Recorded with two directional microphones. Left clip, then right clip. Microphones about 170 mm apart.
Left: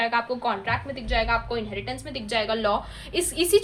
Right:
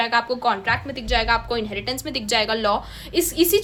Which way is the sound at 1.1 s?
55° right (ahead or behind).